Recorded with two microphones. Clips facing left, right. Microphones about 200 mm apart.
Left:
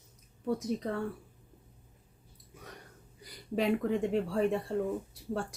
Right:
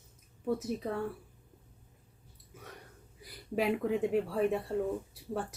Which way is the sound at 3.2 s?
5° right (ahead or behind).